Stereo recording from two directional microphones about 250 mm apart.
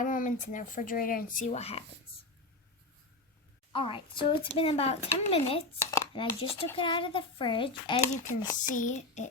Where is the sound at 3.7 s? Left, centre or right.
Centre.